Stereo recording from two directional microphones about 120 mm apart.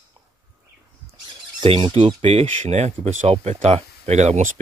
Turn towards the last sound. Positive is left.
turn(degrees=-75)  # may be behind; listen again after turning